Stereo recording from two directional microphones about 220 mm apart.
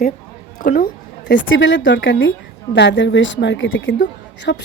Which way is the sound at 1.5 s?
55° left (ahead or behind).